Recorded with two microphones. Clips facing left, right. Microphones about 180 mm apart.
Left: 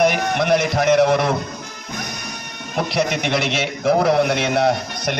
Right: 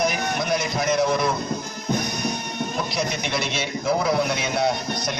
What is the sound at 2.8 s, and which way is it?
A man's voice, 70° left (ahead or behind).